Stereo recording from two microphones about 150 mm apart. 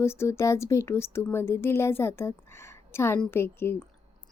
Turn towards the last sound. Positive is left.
turn(degrees=15)  # may be behind; listen again after turning